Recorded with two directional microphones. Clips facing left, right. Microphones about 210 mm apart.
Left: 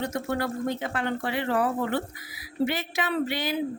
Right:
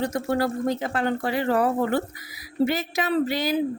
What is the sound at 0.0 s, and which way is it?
Speech, 35° right (ahead or behind).